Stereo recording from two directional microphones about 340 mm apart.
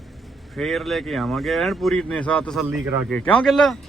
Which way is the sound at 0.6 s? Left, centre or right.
Centre.